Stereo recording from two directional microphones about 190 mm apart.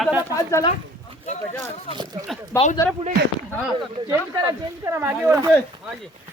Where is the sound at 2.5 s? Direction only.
10° left (ahead or behind).